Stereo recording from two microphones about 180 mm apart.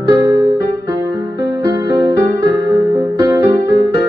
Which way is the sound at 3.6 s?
70° left (ahead or behind).